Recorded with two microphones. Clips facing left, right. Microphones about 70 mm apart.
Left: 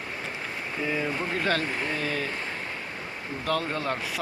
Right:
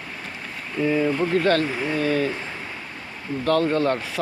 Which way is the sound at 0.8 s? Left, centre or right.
Centre.